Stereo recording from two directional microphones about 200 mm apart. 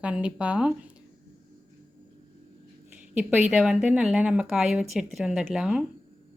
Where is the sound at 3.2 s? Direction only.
5° right (ahead or behind).